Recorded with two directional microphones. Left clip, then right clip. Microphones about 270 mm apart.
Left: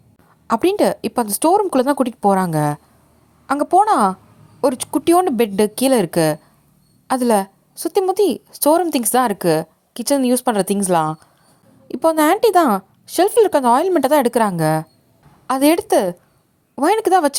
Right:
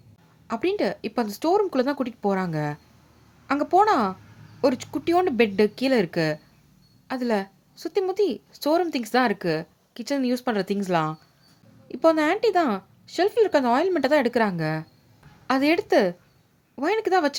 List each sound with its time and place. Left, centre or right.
0.4 s a woman's voice: centre